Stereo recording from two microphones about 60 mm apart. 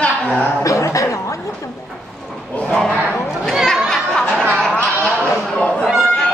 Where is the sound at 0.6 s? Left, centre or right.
Left.